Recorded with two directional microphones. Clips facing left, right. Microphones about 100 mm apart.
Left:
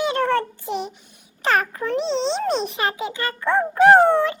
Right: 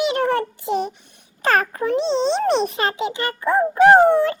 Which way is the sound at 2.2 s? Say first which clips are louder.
Right 4 dB; 55° right (ahead or behind).